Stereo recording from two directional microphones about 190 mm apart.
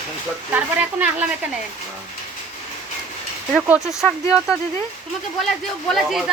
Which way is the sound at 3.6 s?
5° right (ahead or behind).